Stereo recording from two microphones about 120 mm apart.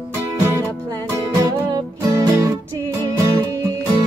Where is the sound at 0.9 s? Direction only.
30° right (ahead or behind).